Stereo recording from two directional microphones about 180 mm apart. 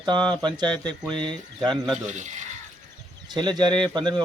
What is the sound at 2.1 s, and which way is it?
Speech, 40° right (ahead or behind).